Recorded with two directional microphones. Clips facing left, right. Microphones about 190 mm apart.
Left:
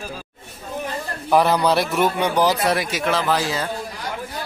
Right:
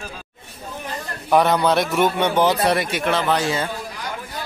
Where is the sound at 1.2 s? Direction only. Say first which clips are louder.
Even; centre (ahead or behind).